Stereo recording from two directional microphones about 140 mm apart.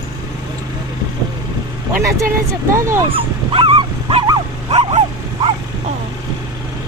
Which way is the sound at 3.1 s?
40° right (ahead or behind).